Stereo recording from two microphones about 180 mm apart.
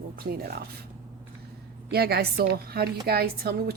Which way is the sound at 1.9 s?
60° right (ahead or behind).